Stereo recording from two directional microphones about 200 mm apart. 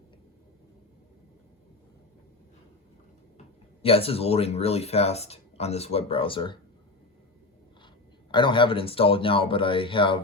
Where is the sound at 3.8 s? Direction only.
30° left (ahead or behind).